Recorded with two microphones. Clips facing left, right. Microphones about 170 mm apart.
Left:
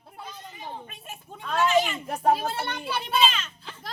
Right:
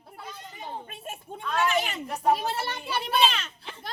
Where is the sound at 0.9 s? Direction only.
50° right (ahead or behind).